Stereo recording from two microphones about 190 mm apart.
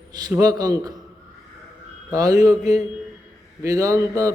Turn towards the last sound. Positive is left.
turn(degrees=-15)  # may be behind; listen again after turning